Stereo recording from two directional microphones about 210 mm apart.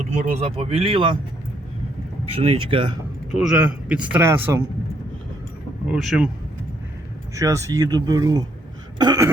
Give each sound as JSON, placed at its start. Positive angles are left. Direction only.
{"t": 0.0, "sound": "speech", "side_deg": -35}
{"t": 2.3, "sound": "speech", "side_deg": -25}
{"t": 3.3, "sound": "speech", "side_deg": -5}
{"t": 5.9, "sound": "speech", "side_deg": -5}
{"t": 7.3, "sound": "speech", "side_deg": -15}